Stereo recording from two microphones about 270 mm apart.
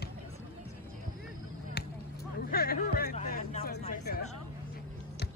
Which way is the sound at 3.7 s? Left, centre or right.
Left.